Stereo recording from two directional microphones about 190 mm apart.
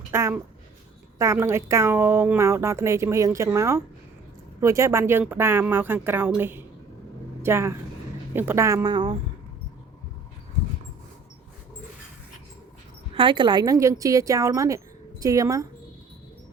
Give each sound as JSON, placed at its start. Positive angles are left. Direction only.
{"t": 0.1, "sound": "a woman's voice", "side_deg": -15}
{"t": 13.1, "sound": "a woman's voice", "side_deg": -25}